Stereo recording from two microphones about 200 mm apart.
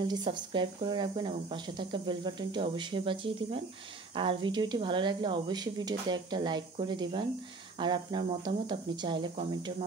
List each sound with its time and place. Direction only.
0.0 s speech: 20° right (ahead or behind)